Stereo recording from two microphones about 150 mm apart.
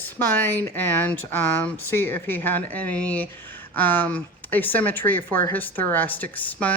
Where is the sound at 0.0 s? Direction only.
15° left (ahead or behind).